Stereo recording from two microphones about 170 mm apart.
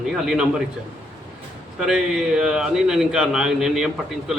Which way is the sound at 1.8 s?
5° right (ahead or behind).